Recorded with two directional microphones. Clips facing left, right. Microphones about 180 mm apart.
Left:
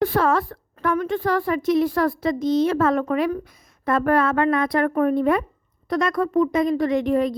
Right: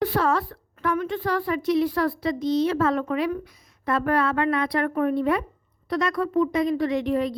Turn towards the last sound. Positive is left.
turn(degrees=45)  # may be behind; listen again after turning